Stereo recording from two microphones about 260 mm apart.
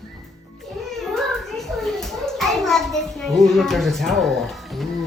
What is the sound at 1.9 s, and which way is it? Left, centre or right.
A child's voice, centre.